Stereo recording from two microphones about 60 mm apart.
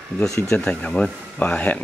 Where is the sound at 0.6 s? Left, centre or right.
Centre.